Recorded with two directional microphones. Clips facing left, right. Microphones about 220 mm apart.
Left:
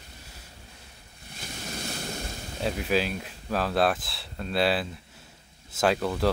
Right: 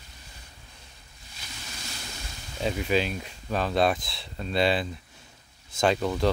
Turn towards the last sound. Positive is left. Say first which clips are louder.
# right 1 dB
turn(degrees=5)  # may be behind; listen again after turning